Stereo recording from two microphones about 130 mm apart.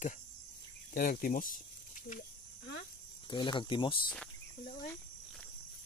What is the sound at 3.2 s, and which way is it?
Speech, 35° left (ahead or behind).